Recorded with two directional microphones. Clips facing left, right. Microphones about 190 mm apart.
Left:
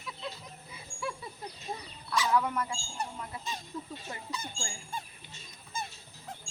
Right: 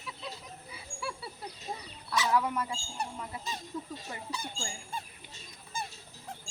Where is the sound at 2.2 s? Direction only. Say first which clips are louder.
Even; 10° right (ahead or behind).